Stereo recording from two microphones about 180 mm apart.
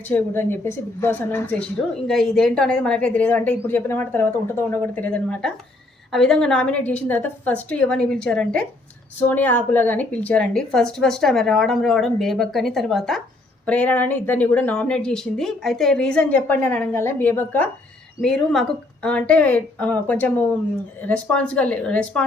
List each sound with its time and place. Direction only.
0.1 s a woman's voice: 10° left (ahead or behind)